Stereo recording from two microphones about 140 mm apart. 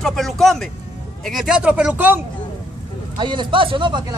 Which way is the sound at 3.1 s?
35° right (ahead or behind).